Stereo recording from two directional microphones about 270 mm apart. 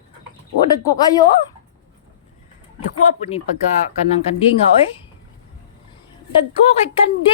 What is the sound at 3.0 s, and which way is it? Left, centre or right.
Speech, left.